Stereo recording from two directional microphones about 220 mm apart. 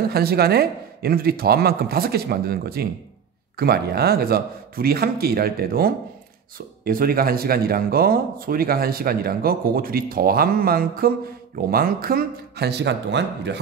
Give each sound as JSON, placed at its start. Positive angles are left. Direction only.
{"t": 0.1, "sound": "speech", "side_deg": -45}